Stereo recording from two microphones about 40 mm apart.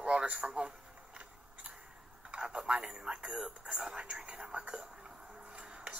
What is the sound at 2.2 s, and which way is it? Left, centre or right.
Speech, right.